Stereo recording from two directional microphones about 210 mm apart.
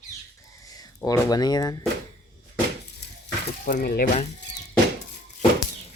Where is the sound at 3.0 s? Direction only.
50° left (ahead or behind).